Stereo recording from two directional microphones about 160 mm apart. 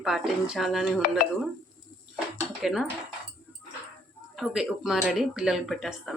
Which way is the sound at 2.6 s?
Centre (ahead or behind).